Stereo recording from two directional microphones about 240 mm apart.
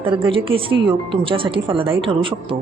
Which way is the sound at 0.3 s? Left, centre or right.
Right.